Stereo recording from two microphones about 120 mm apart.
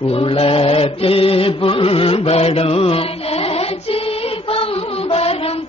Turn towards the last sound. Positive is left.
turn(degrees=55)  # may be behind; listen again after turning